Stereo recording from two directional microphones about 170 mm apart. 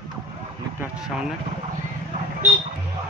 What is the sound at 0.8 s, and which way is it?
Speech, 5° right (ahead or behind).